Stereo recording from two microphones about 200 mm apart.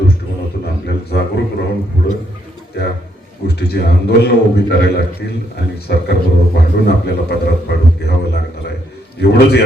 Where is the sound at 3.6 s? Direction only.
55° left (ahead or behind).